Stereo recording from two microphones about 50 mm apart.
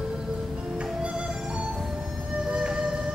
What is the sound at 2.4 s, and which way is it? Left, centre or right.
Music, centre.